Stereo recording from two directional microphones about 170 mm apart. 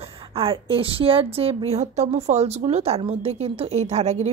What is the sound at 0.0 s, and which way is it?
A woman's voice, 35° right (ahead or behind).